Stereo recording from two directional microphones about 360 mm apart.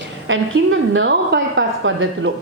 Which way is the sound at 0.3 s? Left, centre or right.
Right.